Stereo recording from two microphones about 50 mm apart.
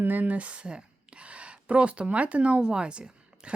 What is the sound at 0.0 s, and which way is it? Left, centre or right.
Speech, right.